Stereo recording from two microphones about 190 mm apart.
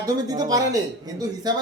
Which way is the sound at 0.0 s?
20° right (ahead or behind).